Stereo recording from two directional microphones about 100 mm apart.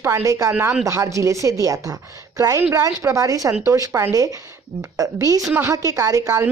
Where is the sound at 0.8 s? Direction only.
30° right (ahead or behind).